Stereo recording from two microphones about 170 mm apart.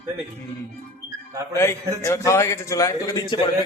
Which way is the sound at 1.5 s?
15° left (ahead or behind).